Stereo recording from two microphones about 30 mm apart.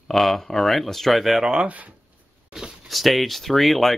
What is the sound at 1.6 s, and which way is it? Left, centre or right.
Speech, right.